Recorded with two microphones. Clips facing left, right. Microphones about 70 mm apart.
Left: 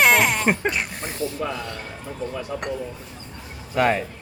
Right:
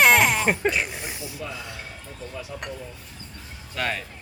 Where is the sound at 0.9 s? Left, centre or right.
Centre.